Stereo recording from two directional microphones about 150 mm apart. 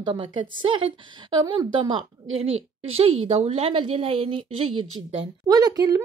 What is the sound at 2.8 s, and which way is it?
A woman's voice, 40° right (ahead or behind).